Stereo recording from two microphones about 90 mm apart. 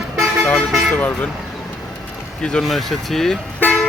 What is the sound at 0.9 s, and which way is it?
Speech, 15° left (ahead or behind).